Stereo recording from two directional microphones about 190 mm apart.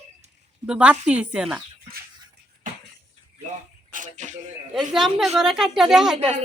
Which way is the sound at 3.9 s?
40° right (ahead or behind).